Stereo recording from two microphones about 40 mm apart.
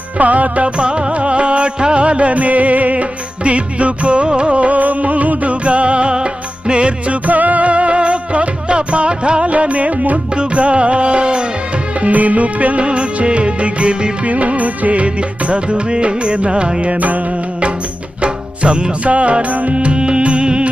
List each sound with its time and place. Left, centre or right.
0.2 s music: right
7.3 s music: right
10.3 s music: right
11.9 s music: right
16.9 s music: right
18.2 s music: right